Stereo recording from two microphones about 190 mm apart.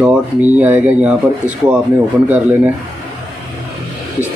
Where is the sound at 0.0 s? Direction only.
10° right (ahead or behind).